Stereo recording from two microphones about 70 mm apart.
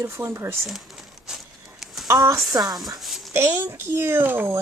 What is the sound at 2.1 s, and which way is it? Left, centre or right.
Speech, right.